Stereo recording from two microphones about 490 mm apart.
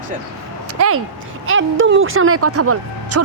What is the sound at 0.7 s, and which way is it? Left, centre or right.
Speech, right.